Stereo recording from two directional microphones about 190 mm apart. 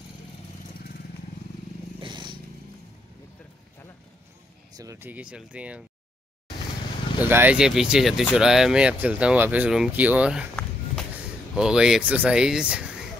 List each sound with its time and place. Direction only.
2.0 s a sound: 25° right (ahead or behind)
4.7 s speech: 15° right (ahead or behind)
7.2 s speech: 10° right (ahead or behind)
11.5 s speech: 5° right (ahead or behind)